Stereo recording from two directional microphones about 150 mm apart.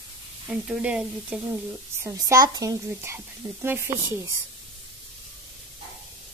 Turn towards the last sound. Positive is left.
turn(degrees=-15)  # may be behind; listen again after turning